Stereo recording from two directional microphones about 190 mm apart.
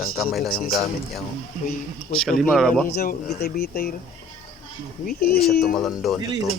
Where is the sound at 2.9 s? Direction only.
55° left (ahead or behind).